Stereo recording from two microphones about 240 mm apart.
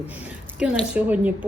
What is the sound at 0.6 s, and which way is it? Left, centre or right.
Speech, centre.